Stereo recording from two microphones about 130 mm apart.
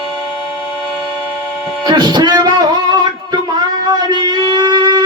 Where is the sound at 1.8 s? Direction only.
30° right (ahead or behind).